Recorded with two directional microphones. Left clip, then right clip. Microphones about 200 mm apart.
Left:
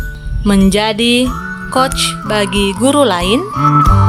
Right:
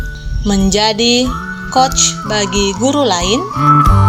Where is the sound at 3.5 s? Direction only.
Centre (ahead or behind).